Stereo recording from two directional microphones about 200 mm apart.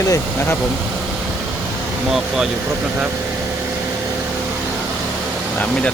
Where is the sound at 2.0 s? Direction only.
Centre (ahead or behind).